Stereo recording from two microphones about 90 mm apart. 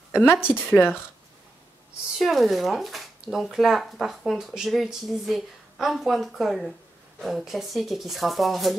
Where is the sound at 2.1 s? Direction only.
Centre (ahead or behind).